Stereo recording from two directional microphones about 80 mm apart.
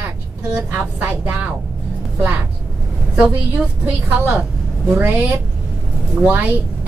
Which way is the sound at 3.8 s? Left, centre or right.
Centre.